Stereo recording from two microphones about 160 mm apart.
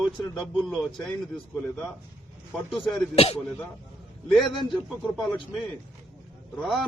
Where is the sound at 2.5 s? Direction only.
Centre (ahead or behind).